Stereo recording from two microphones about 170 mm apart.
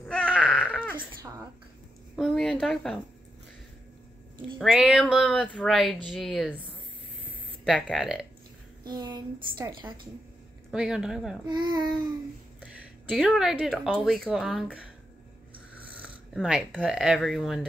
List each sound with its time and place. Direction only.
0.0 s baby cry: 5° left (ahead or behind)
0.4 s baby cry: 5° right (ahead or behind)
2.1 s speech: 5° left (ahead or behind)
4.6 s speech: centre (ahead or behind)
7.6 s speech: centre (ahead or behind)
8.8 s a woman's voice: 25° right (ahead or behind)
10.7 s speech: 5° right (ahead or behind)
11.4 s a woman's voice: 25° right (ahead or behind)
13.1 s speech: centre (ahead or behind)
15.9 s speech: 5° right (ahead or behind)